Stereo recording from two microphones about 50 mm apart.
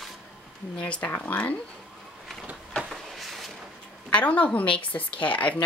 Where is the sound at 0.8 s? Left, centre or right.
Left.